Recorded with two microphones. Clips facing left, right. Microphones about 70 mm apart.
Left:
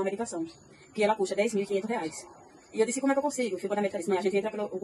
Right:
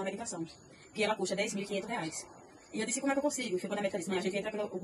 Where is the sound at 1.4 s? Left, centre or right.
Left.